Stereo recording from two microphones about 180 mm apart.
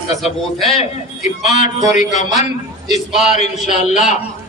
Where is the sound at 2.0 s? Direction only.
40° left (ahead or behind).